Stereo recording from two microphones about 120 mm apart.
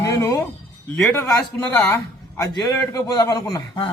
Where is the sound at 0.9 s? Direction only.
15° left (ahead or behind).